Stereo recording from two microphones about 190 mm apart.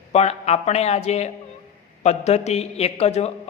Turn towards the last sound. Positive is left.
turn(degrees=35)  # may be behind; listen again after turning